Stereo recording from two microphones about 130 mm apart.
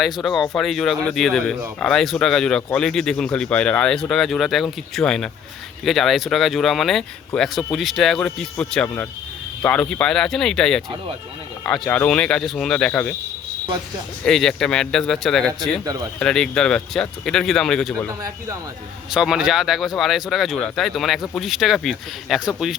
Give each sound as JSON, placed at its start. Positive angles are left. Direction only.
{"t": 0.0, "sound": "speech", "side_deg": 0}
{"t": 14.3, "sound": "speech", "side_deg": 5}
{"t": 15.8, "sound": "speech", "side_deg": -30}
{"t": 16.1, "sound": "speech", "side_deg": 5}
{"t": 19.1, "sound": "speech", "side_deg": -5}